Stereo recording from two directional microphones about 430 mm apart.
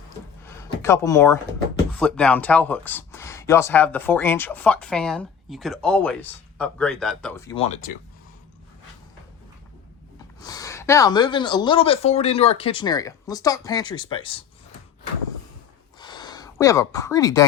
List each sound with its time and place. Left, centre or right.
0.4 s speech: centre
10.4 s speech: centre
16.0 s a sound: centre